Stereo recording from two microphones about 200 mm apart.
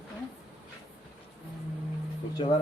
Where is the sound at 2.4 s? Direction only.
25° left (ahead or behind).